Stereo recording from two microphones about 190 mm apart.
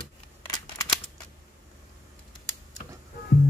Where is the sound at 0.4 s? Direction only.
20° left (ahead or behind).